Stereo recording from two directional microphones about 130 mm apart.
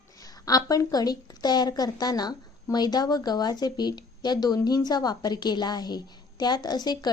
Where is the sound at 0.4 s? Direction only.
30° left (ahead or behind).